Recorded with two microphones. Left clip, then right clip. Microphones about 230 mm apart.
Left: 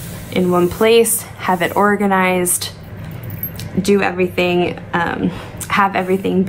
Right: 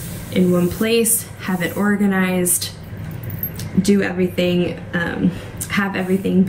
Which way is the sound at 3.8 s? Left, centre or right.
Left.